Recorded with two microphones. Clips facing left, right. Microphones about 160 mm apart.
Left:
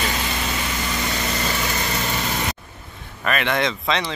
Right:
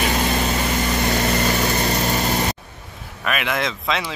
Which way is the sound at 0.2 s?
40° right (ahead or behind).